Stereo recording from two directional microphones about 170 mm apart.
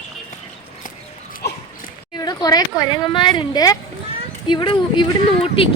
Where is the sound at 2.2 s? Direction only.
20° left (ahead or behind).